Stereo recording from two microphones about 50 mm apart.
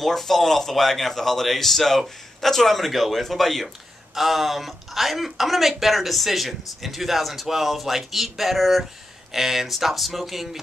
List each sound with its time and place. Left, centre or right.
0.0 s speech: centre